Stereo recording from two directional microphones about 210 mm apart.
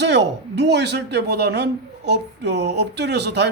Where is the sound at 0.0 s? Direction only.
55° right (ahead or behind).